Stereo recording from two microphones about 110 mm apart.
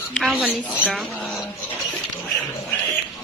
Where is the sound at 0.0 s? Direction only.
10° left (ahead or behind).